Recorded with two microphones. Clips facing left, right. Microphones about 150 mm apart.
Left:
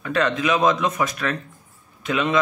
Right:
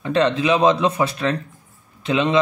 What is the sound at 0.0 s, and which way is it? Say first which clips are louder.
Speech: right 3 dB; 30° right (ahead or behind).